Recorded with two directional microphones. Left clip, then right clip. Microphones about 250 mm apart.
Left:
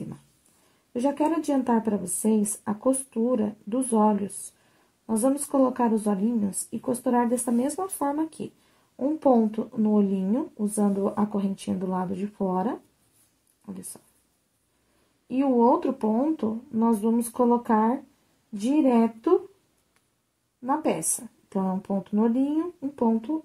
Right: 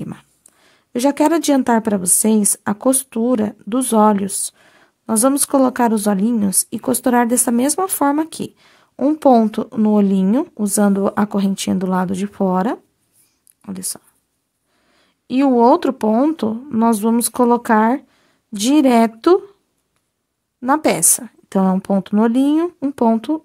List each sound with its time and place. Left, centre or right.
0.9 s speech: right
15.2 s speech: right
20.6 s speech: right